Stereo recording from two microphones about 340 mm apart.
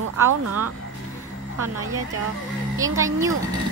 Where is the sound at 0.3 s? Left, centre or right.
Right.